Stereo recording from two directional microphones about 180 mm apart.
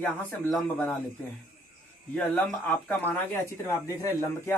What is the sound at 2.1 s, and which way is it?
A man's voice, 5° left (ahead or behind).